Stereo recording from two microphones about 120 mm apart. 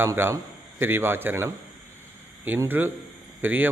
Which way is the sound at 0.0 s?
20° right (ahead or behind).